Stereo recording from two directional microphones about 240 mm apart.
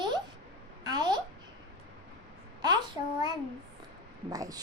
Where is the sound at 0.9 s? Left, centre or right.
Centre.